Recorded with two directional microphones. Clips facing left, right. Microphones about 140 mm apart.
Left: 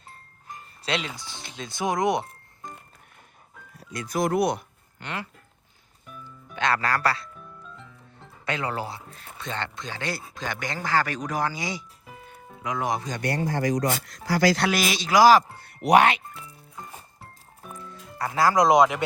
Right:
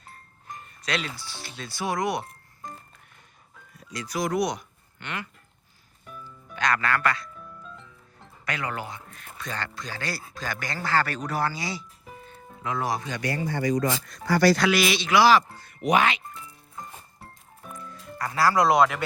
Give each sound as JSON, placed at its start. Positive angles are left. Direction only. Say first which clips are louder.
{"t": 0.9, "sound": "speech", "louder": "left 1 dB", "side_deg": 20}
{"t": 3.9, "sound": "speech", "louder": "left 2 dB", "side_deg": 50}
{"t": 4.9, "sound": "speech", "louder": "left 1 dB", "side_deg": 35}
{"t": 6.6, "sound": "speech", "louder": "left 1 dB", "side_deg": 30}
{"t": 8.4, "sound": "speech", "louder": "left 3 dB", "side_deg": 30}
{"t": 13.0, "sound": "speech", "louder": "left 1 dB", "side_deg": 40}
{"t": 13.2, "sound": "speech", "louder": "left 1 dB", "side_deg": 65}
{"t": 14.7, "sound": "a man's voice", "louder": "right 1 dB", "side_deg": 45}
{"t": 15.6, "sound": "speech", "louder": "left 4 dB", "side_deg": 65}
{"t": 17.7, "sound": "music", "louder": "right 1 dB", "side_deg": 25}